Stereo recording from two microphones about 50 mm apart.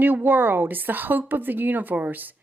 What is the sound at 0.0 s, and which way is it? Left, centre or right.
Speech, right.